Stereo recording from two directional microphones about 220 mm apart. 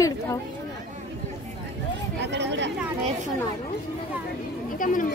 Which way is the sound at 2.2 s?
50° right (ahead or behind).